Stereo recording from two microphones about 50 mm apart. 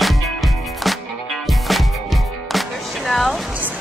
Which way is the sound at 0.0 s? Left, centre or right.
Centre.